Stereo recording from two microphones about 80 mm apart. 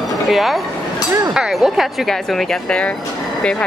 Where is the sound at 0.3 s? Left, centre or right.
Centre.